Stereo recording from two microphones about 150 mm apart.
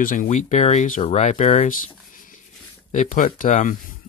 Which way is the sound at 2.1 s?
65° left (ahead or behind).